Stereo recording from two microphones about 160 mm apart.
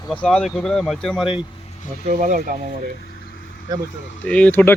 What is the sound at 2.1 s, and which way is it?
Speech, 55° right (ahead or behind).